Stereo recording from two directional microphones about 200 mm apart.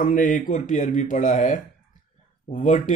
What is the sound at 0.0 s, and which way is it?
Speech, 40° left (ahead or behind).